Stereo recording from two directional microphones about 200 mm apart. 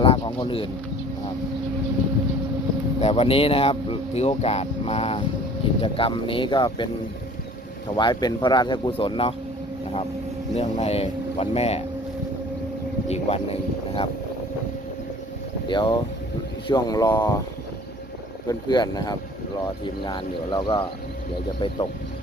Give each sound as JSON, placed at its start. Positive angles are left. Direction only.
{"t": 0.0, "sound": "speech", "side_deg": 25}
{"t": 3.0, "sound": "speech", "side_deg": 30}
{"t": 7.9, "sound": "speech", "side_deg": 20}
{"t": 10.5, "sound": "speech", "side_deg": 35}
{"t": 13.1, "sound": "speech", "side_deg": 30}
{"t": 15.7, "sound": "speech", "side_deg": 25}
{"t": 18.4, "sound": "speech", "side_deg": 20}